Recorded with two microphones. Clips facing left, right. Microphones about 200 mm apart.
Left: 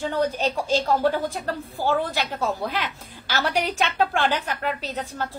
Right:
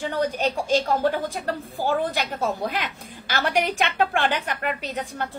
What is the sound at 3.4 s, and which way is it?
A woman's voice, 15° right (ahead or behind).